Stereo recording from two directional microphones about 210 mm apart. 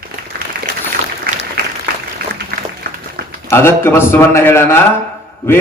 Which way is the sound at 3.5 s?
10° left (ahead or behind).